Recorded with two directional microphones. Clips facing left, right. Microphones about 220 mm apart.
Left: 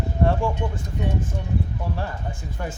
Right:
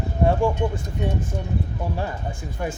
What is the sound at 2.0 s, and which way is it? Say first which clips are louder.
Speech: right 2 dB; 15° right (ahead or behind).